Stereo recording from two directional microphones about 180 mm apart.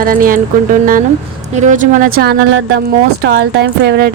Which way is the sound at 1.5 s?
45° right (ahead or behind).